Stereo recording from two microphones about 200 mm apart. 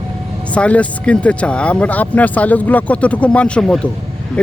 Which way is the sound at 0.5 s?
5° left (ahead or behind).